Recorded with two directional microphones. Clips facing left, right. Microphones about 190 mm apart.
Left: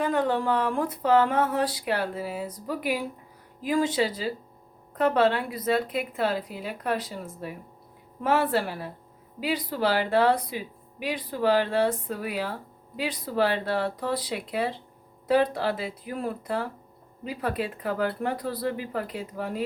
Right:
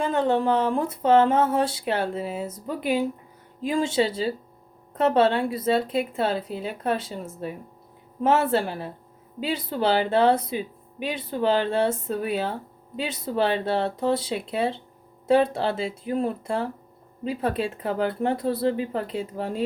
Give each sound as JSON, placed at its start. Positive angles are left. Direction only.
{"t": 0.0, "sound": "speech", "side_deg": -25}